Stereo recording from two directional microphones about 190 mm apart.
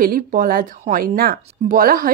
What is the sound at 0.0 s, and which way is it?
Speech, 50° right (ahead or behind).